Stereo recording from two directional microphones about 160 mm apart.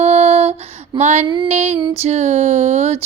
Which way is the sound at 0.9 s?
45° right (ahead or behind).